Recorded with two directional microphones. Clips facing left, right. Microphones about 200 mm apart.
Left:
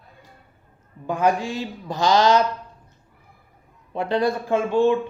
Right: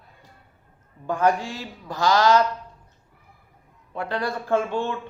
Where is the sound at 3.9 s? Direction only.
20° left (ahead or behind).